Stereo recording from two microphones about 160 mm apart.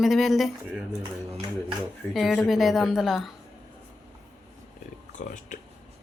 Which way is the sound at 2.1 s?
Centre (ahead or behind).